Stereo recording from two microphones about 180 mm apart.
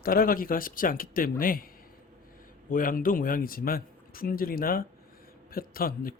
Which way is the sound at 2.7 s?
50° left (ahead or behind).